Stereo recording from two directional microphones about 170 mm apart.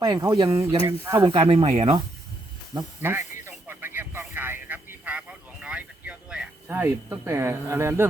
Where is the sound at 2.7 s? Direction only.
15° right (ahead or behind).